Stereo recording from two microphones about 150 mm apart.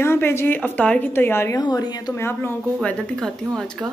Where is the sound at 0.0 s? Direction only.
15° left (ahead or behind).